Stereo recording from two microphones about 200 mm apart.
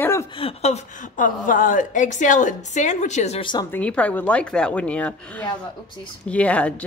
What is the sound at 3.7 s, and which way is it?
Speech, 5° left (ahead or behind).